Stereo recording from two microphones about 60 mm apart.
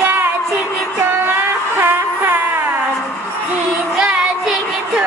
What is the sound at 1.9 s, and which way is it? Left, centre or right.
Music, right.